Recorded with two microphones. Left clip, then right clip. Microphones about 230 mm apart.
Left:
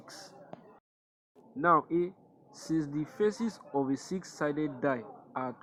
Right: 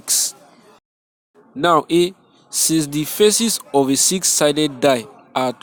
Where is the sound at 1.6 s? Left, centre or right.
Right.